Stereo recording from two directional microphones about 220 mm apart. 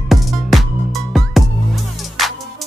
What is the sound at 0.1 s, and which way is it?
Music, centre (ahead or behind).